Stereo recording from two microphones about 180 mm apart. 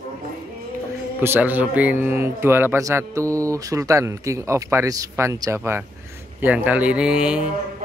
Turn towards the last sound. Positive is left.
turn(degrees=-5)  # may be behind; listen again after turning